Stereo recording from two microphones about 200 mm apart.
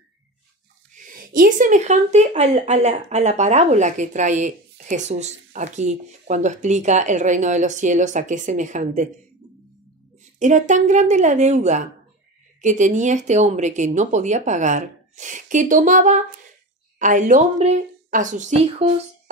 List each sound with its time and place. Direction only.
0.9 s a woman's voice: 45° right (ahead or behind)
10.4 s a woman's voice: 35° right (ahead or behind)